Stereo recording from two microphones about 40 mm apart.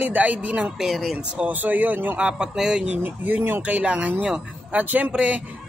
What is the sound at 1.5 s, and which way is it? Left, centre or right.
Speech, right.